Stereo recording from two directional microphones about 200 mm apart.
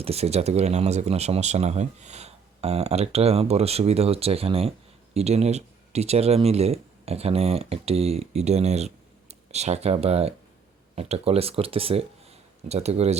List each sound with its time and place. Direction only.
0.0 s speech: 30° right (ahead or behind)